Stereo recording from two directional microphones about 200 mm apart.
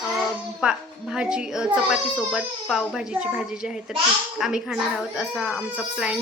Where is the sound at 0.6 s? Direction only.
5° right (ahead or behind).